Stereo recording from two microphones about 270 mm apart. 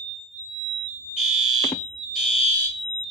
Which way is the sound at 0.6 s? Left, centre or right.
Centre.